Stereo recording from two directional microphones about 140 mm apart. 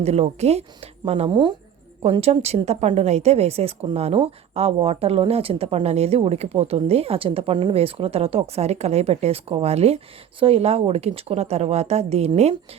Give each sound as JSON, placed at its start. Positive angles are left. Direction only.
{"t": 0.0, "sound": "a woman's voice", "side_deg": -50}